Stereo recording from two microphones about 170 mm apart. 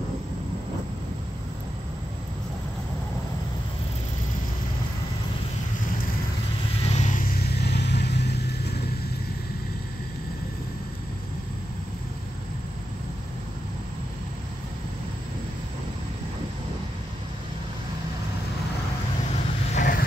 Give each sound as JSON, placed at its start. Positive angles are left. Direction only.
{"t": 6.8, "sound": "vehicle", "side_deg": 40}
{"t": 19.7, "sound": "vehicle", "side_deg": 50}